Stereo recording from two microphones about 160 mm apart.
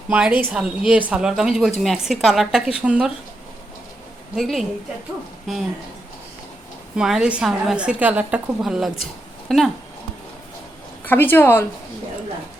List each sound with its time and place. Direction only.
0.1 s a woman's voice: 10° right (ahead or behind)
4.4 s a woman's voice: centre (ahead or behind)
6.9 s a woman's voice: 5° right (ahead or behind)
11.0 s a woman's voice: 10° left (ahead or behind)